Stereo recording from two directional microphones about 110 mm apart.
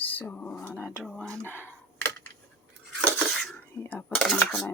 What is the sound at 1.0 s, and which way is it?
Speech, 5° left (ahead or behind).